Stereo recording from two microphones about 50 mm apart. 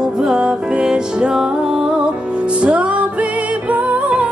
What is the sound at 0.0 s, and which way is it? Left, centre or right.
Music, centre.